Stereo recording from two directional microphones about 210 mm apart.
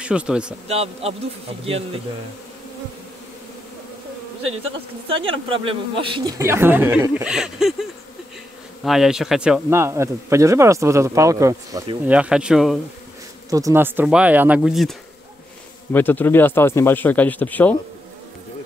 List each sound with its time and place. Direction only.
0.0 s a man's voice: 5° right (ahead or behind)
0.7 s speech: 30° right (ahead or behind)
5.0 s speech: 25° right (ahead or behind)
12.2 s a man's voice: 5° right (ahead or behind)
13.5 s speech: 15° right (ahead or behind); by 17.7 s 10° left (ahead or behind)